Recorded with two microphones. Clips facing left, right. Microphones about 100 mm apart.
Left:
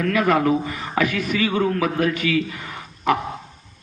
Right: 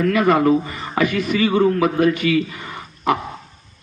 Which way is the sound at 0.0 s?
Centre (ahead or behind).